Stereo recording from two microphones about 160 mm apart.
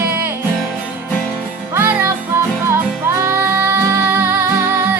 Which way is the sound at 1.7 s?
15° right (ahead or behind).